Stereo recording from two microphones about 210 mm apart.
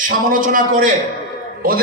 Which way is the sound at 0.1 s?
40° right (ahead or behind).